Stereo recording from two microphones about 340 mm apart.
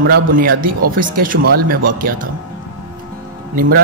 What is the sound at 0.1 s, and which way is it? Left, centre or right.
Speech, right.